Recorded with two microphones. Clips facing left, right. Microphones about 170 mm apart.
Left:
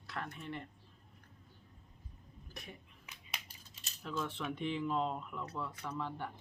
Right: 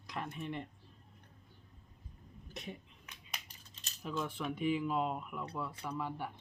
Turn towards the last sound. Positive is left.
turn(degrees=-10)  # may be behind; listen again after turning